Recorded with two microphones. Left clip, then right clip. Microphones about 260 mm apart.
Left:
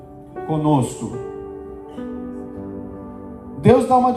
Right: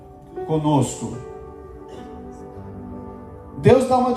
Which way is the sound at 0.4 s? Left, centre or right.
Centre.